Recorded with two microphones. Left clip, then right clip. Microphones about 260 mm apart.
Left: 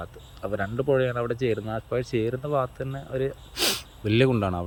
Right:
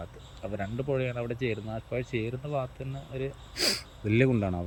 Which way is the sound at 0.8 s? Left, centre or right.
Left.